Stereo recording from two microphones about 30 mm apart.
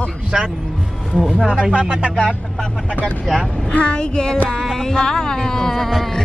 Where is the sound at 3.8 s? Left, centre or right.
Left.